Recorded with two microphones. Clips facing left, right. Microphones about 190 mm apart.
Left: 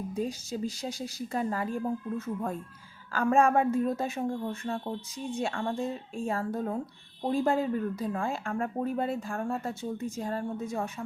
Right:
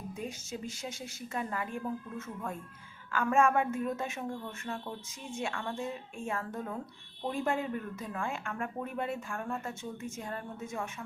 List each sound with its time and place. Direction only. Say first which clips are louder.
0.1 s speech: left 6 dB; 35° left (ahead or behind)